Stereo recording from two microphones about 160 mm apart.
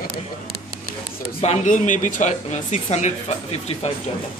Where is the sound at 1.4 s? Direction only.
50° left (ahead or behind).